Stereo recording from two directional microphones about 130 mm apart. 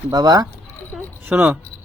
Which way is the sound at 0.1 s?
30° right (ahead or behind).